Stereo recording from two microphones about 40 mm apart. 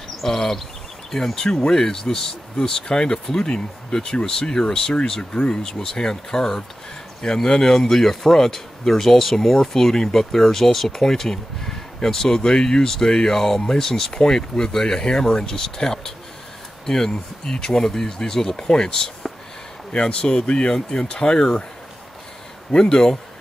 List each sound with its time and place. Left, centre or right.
0.2 s speech: centre
22.7 s speech: centre